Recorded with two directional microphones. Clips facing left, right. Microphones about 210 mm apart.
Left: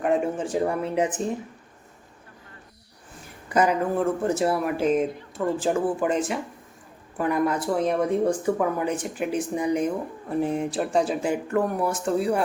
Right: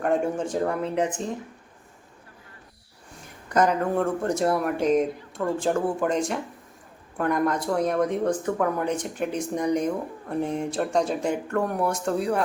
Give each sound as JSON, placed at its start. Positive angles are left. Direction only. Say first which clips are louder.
{"t": 0.0, "sound": "speech", "louder": "even", "side_deg": 5}
{"t": 3.5, "sound": "speech", "louder": "even", "side_deg": 10}